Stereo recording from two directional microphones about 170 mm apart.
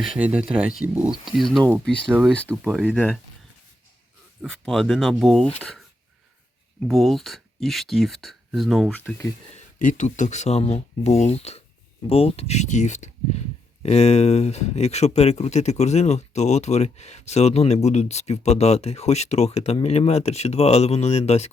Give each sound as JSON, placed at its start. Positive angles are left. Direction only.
{"t": 0.2, "sound": "speech", "side_deg": -10}
{"t": 2.6, "sound": "speech", "side_deg": -5}
{"t": 2.9, "sound": "speech", "side_deg": 5}
{"t": 4.4, "sound": "speech", "side_deg": 0}
{"t": 6.8, "sound": "speech", "side_deg": 0}
{"t": 9.7, "sound": "speech", "side_deg": 50}